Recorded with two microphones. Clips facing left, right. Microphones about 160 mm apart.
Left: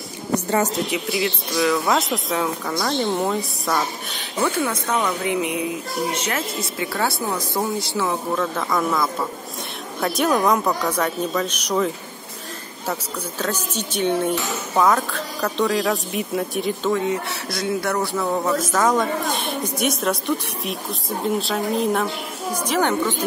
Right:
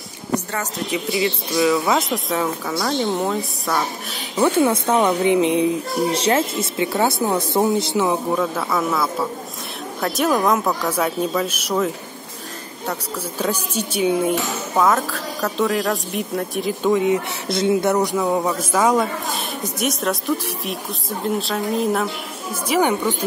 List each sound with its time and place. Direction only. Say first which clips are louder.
0.9 s speech: right 2 dB; centre (ahead or behind)
4.6 s speech: right 6 dB; 30° right (ahead or behind)
8.5 s speech: even; 5° right (ahead or behind)
13.4 s speech: right 3 dB; 10° right (ahead or behind)
16.8 s speech: right 7 dB; 15° right (ahead or behind); by 22.0 s centre (ahead or behind)
22.7 s speech: right 3 dB; 10° right (ahead or behind)